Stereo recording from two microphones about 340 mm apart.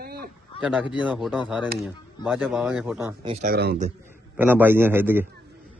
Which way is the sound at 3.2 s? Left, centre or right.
Centre.